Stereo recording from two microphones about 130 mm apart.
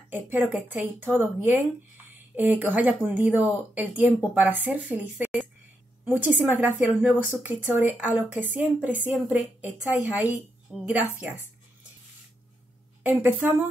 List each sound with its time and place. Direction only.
0.1 s a woman's voice: 15° right (ahead or behind)
13.2 s a woman's voice: 15° right (ahead or behind)